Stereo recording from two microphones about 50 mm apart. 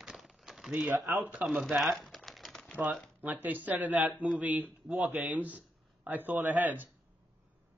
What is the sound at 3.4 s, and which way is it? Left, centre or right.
A man's voice, right.